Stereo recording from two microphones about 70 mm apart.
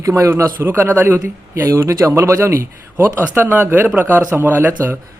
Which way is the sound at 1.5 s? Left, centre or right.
Right.